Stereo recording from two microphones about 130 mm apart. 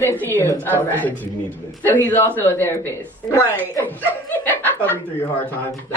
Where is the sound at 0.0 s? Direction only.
15° left (ahead or behind).